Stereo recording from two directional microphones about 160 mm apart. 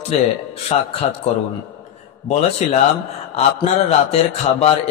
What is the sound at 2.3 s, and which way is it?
A man's voice, 45° left (ahead or behind).